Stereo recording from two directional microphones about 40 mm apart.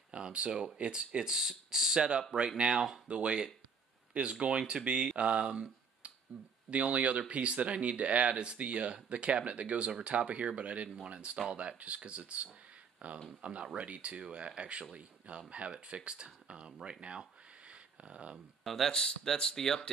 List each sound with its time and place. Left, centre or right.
0.1 s speech: right
17.0 s a sound: right
18.6 s speech: centre
18.9 s speech: centre